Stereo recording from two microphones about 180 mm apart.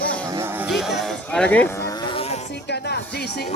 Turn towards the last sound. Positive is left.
turn(degrees=65)  # may be behind; listen again after turning